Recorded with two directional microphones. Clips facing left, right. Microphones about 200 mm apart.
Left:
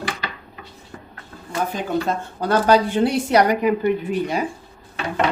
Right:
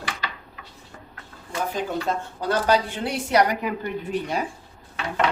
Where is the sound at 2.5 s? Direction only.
45° left (ahead or behind).